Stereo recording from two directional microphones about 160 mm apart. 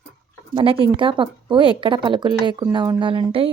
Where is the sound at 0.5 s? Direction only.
35° right (ahead or behind).